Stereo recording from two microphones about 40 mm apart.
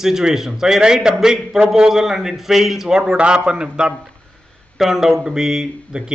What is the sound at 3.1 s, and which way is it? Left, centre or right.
Speech, right.